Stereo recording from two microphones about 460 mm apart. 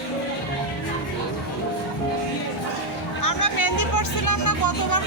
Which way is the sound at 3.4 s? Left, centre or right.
Left.